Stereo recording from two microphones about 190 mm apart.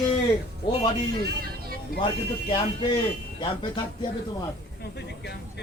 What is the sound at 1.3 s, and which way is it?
Vehicle, 55° right (ahead or behind).